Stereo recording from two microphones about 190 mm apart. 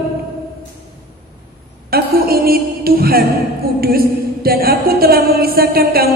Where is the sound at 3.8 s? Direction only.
50° right (ahead or behind).